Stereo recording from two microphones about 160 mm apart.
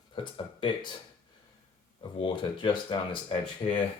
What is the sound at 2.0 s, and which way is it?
Speech, 30° left (ahead or behind).